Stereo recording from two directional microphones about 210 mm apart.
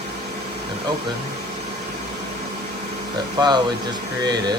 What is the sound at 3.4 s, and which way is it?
Speech, 20° right (ahead or behind).